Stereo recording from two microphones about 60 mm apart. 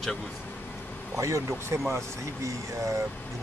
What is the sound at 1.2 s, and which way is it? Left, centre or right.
Speech, right.